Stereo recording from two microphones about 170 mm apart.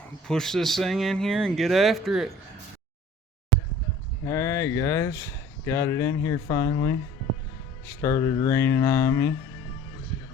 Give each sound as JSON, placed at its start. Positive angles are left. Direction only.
{"t": 0.3, "sound": "speech", "side_deg": 5}
{"t": 4.3, "sound": "speech", "side_deg": 15}